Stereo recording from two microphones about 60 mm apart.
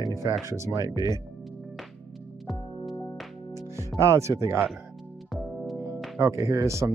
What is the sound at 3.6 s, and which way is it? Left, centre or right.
Music, right.